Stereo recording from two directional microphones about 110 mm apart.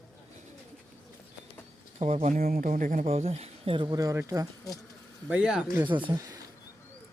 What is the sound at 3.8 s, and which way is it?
Speech, 35° right (ahead or behind).